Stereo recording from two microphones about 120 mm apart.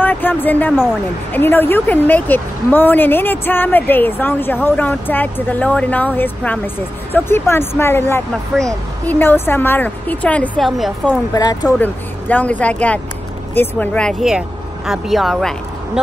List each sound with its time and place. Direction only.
0.0 s speech: 15° left (ahead or behind)
10.6 s speech: centre (ahead or behind)
11.3 s speech: 30° left (ahead or behind)
11.8 s speech: 15° left (ahead or behind)
14.9 s speech: centre (ahead or behind)